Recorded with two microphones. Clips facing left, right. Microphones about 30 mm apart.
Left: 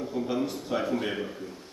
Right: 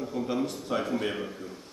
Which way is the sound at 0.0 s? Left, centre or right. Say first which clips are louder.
Left 1 dB; centre.